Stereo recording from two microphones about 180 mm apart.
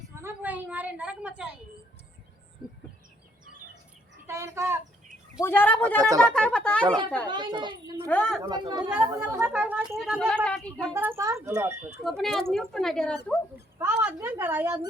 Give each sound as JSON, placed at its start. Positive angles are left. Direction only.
{"t": 0.2, "sound": "a sound", "side_deg": -10}
{"t": 4.3, "sound": "speech", "side_deg": -15}
{"t": 5.4, "sound": "a woman's voice", "side_deg": 10}
{"t": 6.8, "sound": "a child's voice", "side_deg": -25}
{"t": 8.0, "sound": "a woman's voice", "side_deg": 10}
{"t": 8.4, "sound": "a child's voice", "side_deg": -25}
{"t": 8.9, "sound": "a woman's voice", "side_deg": -5}
{"t": 10.9, "sound": "speech", "side_deg": -15}
{"t": 12.0, "sound": "a woman's voice", "side_deg": 0}
{"t": 13.7, "sound": "a woman's voice", "side_deg": -10}